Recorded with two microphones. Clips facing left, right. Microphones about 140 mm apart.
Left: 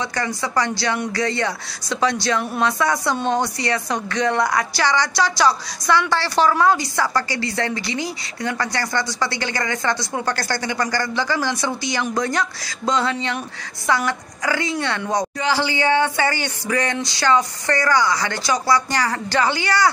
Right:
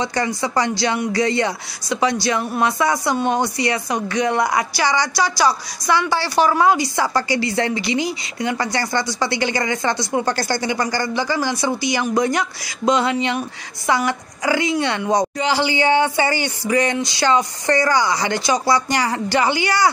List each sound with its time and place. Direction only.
0.0 s a woman's voice: 20° right (ahead or behind)